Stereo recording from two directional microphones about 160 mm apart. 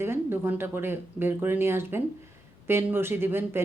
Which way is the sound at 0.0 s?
15° right (ahead or behind).